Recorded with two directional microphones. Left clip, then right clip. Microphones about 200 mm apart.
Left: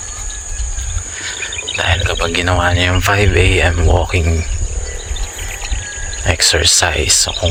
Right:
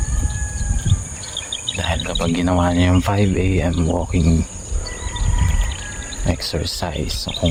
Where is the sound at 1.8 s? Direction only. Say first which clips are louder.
Left 9 dB; centre (ahead or behind).